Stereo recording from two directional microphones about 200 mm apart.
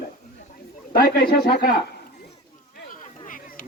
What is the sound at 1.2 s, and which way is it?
Speech, 50° left (ahead or behind).